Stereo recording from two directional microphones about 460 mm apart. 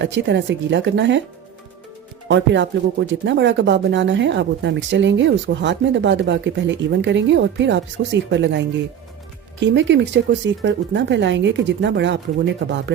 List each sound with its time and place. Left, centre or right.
0.0 s speech: right
2.2 s speech: right